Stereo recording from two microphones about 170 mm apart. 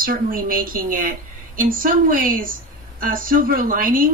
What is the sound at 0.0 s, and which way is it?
Speech, 55° right (ahead or behind).